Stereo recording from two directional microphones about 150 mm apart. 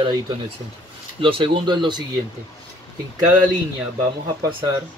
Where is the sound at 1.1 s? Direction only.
35° right (ahead or behind).